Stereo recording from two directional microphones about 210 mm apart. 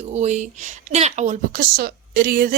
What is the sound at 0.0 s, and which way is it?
A woman's voice, 35° right (ahead or behind).